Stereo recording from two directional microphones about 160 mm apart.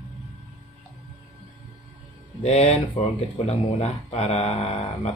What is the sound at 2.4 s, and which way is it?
Speech, 40° left (ahead or behind).